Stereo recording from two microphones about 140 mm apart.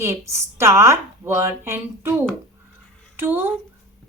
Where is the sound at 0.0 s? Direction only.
20° right (ahead or behind).